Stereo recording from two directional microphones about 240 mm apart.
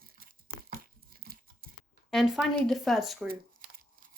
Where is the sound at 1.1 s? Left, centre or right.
Right.